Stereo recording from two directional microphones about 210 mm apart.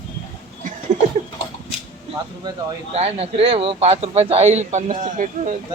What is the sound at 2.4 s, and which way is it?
Speech, 30° right (ahead or behind).